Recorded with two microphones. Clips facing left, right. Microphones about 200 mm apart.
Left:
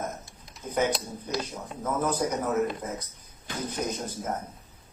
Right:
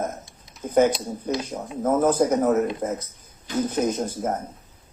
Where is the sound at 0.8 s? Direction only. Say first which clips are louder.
Right 8 dB; 45° right (ahead or behind).